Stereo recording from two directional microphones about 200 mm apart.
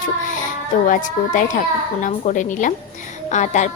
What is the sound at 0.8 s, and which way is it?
A woman's voice, 40° left (ahead or behind).